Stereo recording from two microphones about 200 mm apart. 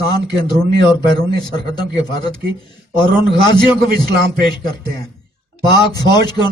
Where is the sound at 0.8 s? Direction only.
20° left (ahead or behind).